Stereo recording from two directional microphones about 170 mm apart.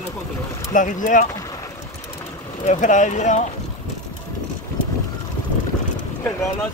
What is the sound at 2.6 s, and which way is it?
Speech, 45° left (ahead or behind).